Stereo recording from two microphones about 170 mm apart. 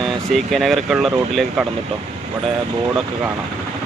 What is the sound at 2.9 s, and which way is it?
Speech, 10° right (ahead or behind).